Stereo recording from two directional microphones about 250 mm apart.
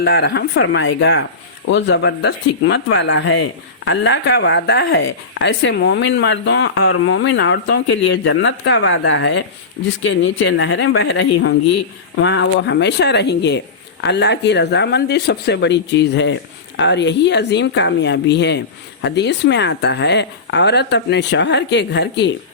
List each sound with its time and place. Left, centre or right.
0.0 s speech: left